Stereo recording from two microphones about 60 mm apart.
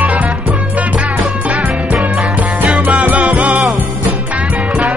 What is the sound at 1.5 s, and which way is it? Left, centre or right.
Music, right.